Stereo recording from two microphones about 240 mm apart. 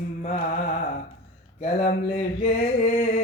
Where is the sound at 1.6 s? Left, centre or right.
Left.